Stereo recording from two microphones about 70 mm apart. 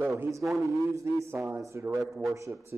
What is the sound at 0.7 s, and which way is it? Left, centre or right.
A man's voice, right.